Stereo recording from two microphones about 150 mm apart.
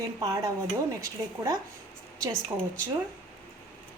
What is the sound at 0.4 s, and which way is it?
A woman's voice, 20° right (ahead or behind).